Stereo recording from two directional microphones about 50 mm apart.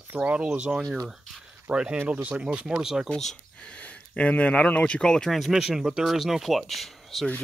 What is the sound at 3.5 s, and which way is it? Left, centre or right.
Speech, left.